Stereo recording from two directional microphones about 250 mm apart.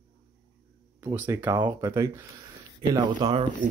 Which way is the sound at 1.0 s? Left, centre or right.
Centre.